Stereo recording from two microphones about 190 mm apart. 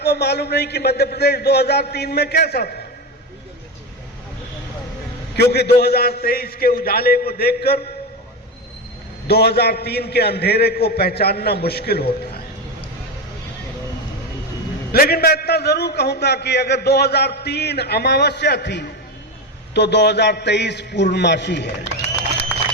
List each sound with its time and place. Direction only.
0.0 s a man's voice: 60° left (ahead or behind)
5.4 s a man's voice: 60° left (ahead or behind)
9.2 s a man's voice: 60° left (ahead or behind)
14.9 s a man's voice: 50° left (ahead or behind)